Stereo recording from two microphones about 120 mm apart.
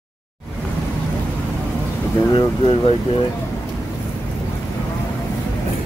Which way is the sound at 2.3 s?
50° left (ahead or behind).